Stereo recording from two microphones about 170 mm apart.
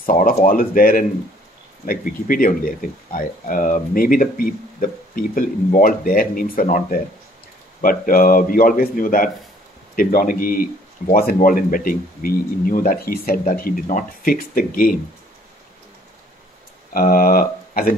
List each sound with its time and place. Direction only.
0.0 s speech: 55° left (ahead or behind)
16.9 s speech: 55° left (ahead or behind)